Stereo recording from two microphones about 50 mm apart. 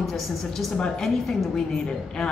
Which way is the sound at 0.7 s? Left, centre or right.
Centre.